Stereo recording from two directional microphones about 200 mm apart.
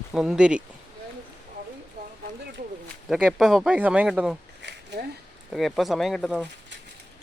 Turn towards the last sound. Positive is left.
turn(degrees=0)  # may be behind; listen again after turning